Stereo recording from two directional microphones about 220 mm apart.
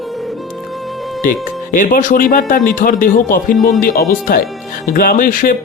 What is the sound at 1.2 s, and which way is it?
Speech, 35° left (ahead or behind).